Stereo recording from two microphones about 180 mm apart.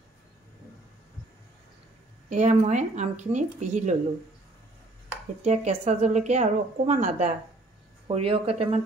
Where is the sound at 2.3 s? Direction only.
40° right (ahead or behind).